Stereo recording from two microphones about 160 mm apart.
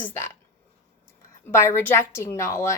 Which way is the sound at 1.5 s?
15° left (ahead or behind).